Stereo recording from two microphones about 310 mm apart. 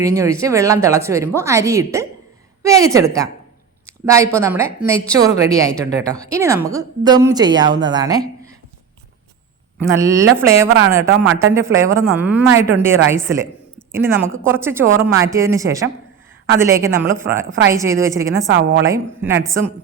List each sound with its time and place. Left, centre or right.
0.0 s a woman's voice: centre
9.8 s a woman's voice: centre
18.5 s a woman's voice: right
18.9 s a woman's voice: centre